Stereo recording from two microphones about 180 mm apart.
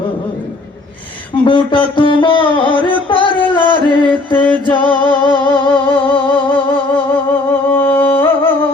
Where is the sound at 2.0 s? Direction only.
25° left (ahead or behind).